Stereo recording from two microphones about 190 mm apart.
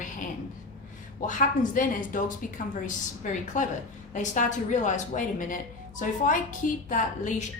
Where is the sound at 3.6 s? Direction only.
40° left (ahead or behind).